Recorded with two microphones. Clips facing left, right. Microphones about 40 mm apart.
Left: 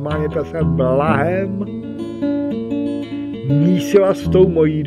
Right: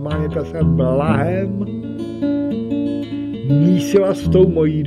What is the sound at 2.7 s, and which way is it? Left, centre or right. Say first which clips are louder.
Music: right 1 dB; right.